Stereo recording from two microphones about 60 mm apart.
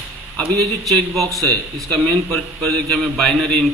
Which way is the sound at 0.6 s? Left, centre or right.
Centre.